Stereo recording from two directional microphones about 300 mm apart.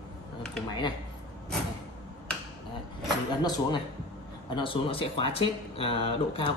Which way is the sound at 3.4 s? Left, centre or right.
Centre.